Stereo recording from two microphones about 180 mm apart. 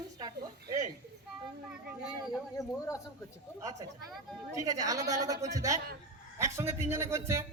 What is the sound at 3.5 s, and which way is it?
A woman's voice, 20° right (ahead or behind).